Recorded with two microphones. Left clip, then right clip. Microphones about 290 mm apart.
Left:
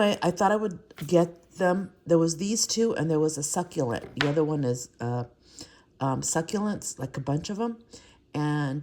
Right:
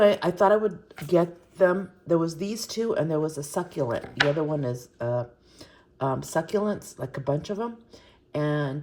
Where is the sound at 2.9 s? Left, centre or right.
Left.